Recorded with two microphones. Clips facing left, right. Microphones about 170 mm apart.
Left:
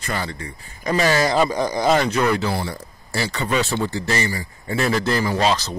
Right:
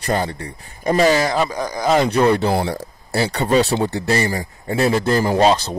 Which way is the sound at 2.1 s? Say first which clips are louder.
Right 5 dB; 35° right (ahead or behind).